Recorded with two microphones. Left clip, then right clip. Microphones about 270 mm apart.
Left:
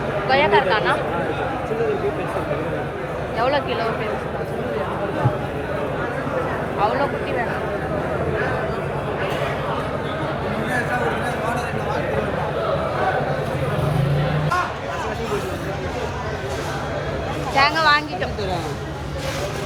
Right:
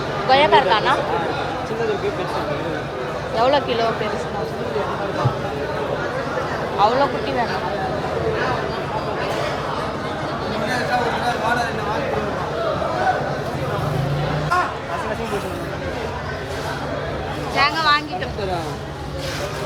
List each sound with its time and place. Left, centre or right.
0.3 s speech: right
3.3 s speech: right
17.6 s speech: centre